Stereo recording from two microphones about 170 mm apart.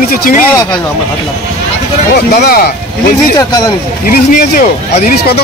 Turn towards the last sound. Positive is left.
turn(degrees=55)  # may be behind; listen again after turning